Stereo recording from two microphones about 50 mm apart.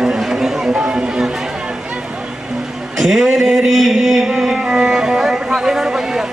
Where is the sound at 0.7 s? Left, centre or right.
Centre.